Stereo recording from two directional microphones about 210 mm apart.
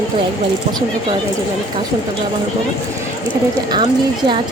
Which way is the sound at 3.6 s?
20° right (ahead or behind).